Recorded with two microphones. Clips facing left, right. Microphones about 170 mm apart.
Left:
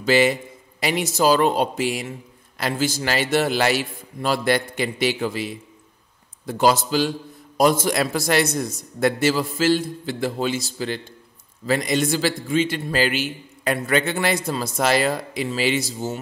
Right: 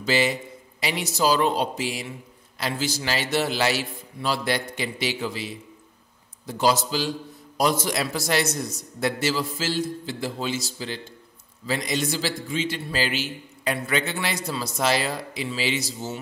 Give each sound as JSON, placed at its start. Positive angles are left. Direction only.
{"t": 0.0, "sound": "a man's voice", "side_deg": 55}